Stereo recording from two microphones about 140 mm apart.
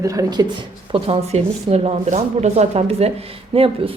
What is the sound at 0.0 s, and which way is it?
Speech, 25° right (ahead or behind).